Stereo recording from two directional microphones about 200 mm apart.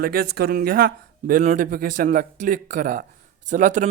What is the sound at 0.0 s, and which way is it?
Speech, 50° right (ahead or behind).